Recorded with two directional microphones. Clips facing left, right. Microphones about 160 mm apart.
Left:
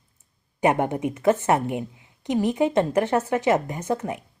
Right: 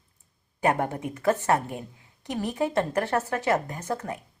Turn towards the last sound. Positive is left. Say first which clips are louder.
# left 5 dB
turn(degrees=20)  # may be behind; listen again after turning